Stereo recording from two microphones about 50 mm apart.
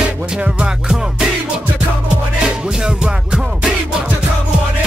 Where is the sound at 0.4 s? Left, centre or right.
Centre.